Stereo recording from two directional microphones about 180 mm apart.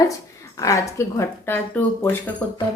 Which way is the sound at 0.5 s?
20° left (ahead or behind).